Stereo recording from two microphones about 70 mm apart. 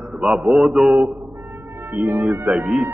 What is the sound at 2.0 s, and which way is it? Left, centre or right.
Speech, right.